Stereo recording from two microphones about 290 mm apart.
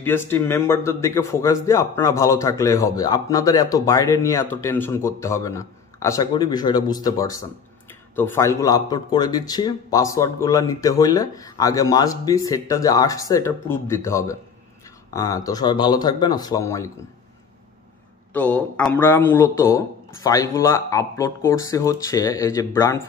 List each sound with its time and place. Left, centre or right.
0.0 s a man's voice: centre
18.3 s a man's voice: centre